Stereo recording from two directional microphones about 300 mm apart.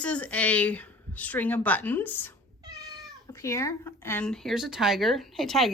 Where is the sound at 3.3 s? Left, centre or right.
Centre.